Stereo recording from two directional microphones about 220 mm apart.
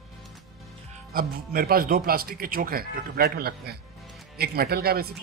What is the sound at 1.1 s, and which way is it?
A man's voice, 40° right (ahead or behind).